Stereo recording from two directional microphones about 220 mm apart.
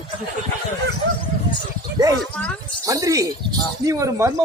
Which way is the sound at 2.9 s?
15° right (ahead or behind).